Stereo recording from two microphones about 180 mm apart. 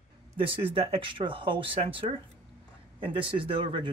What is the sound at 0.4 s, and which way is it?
Speech, 30° right (ahead or behind).